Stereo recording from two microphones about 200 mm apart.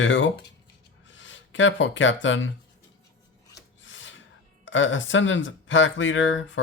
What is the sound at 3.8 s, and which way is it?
Filing, 70° left (ahead or behind).